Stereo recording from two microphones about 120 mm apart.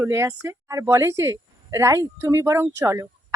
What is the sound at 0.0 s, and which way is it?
Speech, 25° right (ahead or behind).